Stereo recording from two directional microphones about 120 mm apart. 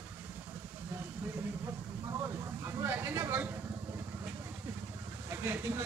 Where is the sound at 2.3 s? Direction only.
25° right (ahead or behind).